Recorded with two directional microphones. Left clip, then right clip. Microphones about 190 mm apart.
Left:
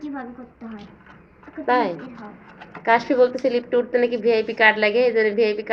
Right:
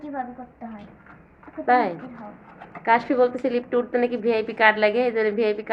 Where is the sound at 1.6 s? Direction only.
15° right (ahead or behind).